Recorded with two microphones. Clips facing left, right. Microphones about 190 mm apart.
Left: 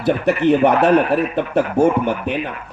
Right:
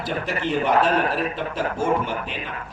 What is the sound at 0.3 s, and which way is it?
Speech, 60° left (ahead or behind).